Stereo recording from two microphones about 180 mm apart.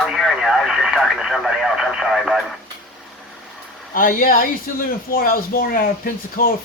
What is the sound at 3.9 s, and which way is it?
Speech, 50° left (ahead or behind).